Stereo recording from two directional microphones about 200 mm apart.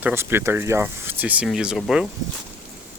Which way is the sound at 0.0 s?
10° right (ahead or behind).